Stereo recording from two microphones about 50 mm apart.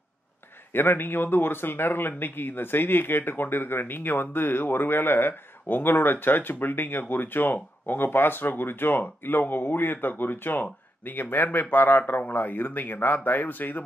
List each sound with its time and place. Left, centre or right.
0.7 s speech: left